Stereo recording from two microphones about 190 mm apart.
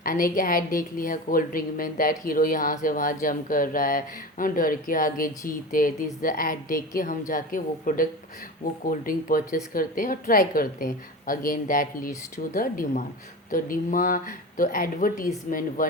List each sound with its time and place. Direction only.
0.0 s a woman's voice: 50° left (ahead or behind)